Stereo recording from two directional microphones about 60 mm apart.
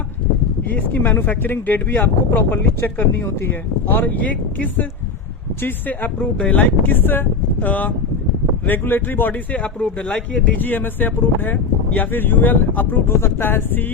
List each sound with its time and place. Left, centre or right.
0.7 s speech: left
6.1 s speech: left
9.8 s speech: centre; by 13.8 s left